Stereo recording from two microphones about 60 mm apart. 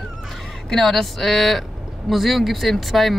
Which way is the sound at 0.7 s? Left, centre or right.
Centre.